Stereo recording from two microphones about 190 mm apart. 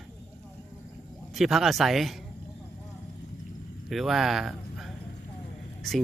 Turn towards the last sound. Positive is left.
turn(degrees=0)  # may be behind; listen again after turning